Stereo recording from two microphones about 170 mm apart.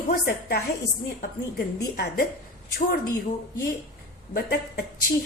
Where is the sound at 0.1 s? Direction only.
65° left (ahead or behind).